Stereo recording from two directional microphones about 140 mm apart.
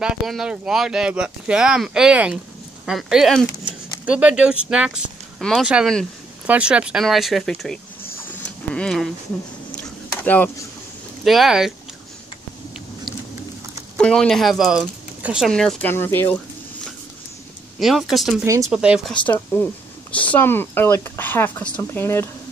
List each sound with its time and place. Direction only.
0.0 s speech: 5° right (ahead or behind)
10.2 s speech: 10° left (ahead or behind)
11.2 s speech: centre (ahead or behind)
13.9 s speech: 5° left (ahead or behind)
15.9 s speech: 15° left (ahead or behind)
17.7 s speech: centre (ahead or behind)
18.4 s speech: 25° right (ahead or behind)
18.7 s speech: 5° right (ahead or behind)
19.1 s speech: 10° left (ahead or behind)